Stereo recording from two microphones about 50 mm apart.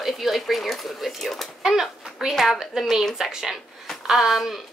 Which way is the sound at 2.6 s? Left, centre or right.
Centre.